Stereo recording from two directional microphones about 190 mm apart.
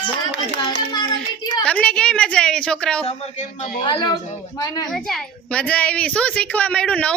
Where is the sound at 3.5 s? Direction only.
45° left (ahead or behind).